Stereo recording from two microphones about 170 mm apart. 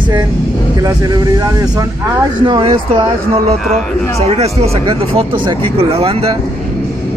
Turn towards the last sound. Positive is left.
turn(degrees=-35)  # may be behind; listen again after turning